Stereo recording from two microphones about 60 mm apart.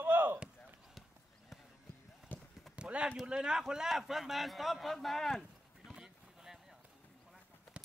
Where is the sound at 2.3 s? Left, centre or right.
Left.